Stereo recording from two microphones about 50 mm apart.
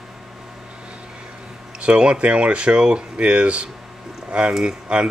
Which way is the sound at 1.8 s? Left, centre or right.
Right.